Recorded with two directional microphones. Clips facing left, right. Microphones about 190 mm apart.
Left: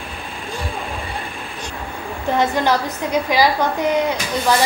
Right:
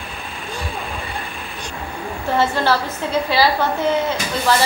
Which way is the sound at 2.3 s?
15° left (ahead or behind).